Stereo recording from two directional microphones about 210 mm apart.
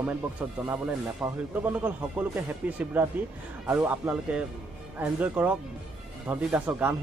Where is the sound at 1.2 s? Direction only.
5° right (ahead or behind).